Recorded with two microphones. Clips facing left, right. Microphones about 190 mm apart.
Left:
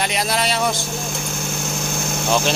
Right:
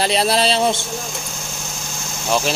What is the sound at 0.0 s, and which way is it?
Speech, 30° right (ahead or behind).